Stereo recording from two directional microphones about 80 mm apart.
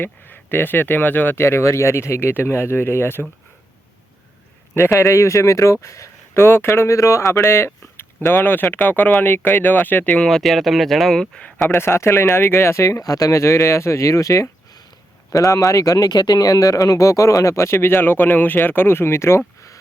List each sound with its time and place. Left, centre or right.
0.0 s speech: left
4.9 s speech: left; by 10.2 s centre
10.2 s speech: centre
11.7 s speech: left